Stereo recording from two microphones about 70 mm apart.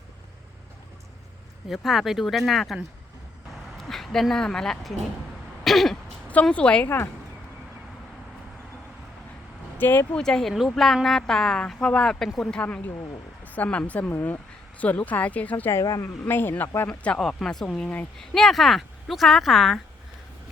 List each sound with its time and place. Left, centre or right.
1.6 s a woman's voice: centre
5.6 s throat clearing: centre
6.5 s a woman's voice: centre
6.8 s speech: left
9.7 s speech: left
10.2 s a woman's voice: centre
13.4 s speech: left
14.1 s speech: left
14.8 s speech: left
15.7 s a woman's voice: left
16.2 s speech: left
17.0 s a woman's voice: centre
17.2 s a woman's voice: centre